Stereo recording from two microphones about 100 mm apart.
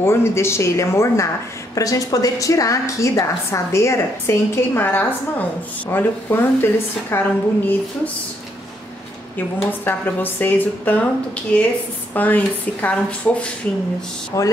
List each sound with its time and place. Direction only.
0.0 s a woman's voice: 25° left (ahead or behind)
9.7 s a woman's voice: 20° left (ahead or behind)
12.1 s a woman's voice: 15° left (ahead or behind)
14.3 s a woman's voice: 35° left (ahead or behind)